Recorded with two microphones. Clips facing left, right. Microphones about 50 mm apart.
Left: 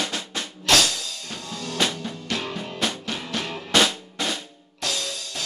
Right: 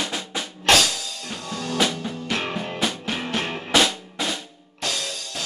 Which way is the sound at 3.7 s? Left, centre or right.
Centre.